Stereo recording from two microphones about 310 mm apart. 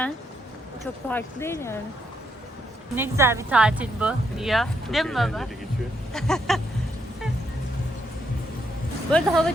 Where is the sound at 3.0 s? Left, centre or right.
Centre.